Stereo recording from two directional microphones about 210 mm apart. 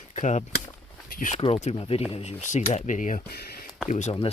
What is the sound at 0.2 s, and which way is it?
Speech, 35° left (ahead or behind).